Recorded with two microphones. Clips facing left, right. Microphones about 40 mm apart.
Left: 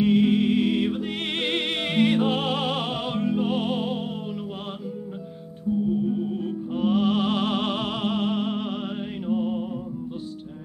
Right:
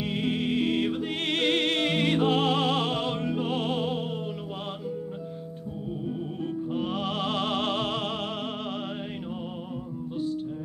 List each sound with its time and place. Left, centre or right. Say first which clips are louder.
0.0 s music: left 9 dB; centre
1.3 s music: right 3 dB; centre
6.0 s music: left 5 dB; centre